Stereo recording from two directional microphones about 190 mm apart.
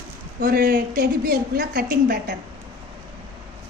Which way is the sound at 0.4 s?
50° right (ahead or behind).